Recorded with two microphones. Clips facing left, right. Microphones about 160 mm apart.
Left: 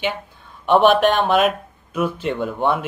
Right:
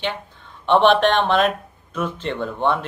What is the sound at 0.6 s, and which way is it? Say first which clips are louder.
Speech: left 1 dB; 10° left (ahead or behind).